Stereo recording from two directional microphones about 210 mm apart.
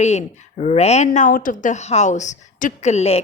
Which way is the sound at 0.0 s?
30° left (ahead or behind).